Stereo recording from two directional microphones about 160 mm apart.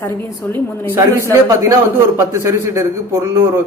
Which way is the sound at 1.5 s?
20° right (ahead or behind).